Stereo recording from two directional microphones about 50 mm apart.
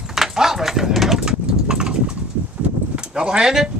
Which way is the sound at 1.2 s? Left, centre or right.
Centre.